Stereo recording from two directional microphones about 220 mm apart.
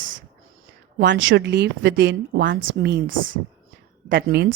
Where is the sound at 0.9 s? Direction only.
55° right (ahead or behind).